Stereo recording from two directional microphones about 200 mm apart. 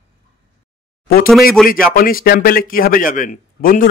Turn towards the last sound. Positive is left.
turn(degrees=45)  # may be behind; listen again after turning